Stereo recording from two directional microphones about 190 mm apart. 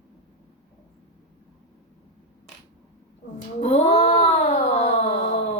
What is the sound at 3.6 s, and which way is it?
Cat, 35° left (ahead or behind).